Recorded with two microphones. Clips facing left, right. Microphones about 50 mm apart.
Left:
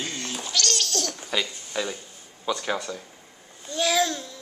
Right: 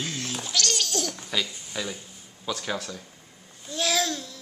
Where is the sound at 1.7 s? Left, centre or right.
Centre.